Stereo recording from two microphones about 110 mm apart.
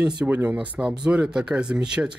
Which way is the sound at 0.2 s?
10° right (ahead or behind).